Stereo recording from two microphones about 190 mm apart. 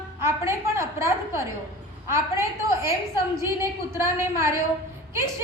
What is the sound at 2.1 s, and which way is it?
Speech, 15° right (ahead or behind).